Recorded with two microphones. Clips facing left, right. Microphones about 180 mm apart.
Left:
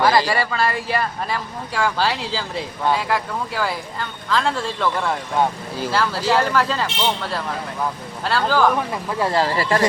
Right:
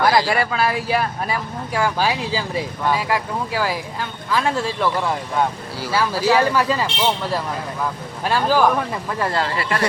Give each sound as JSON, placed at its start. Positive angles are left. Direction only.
{"t": 0.0, "sound": "speech", "side_deg": -15}
{"t": 8.2, "sound": "speech", "side_deg": -15}
{"t": 9.1, "sound": "speech", "side_deg": 15}
{"t": 9.4, "sound": "speech", "side_deg": 30}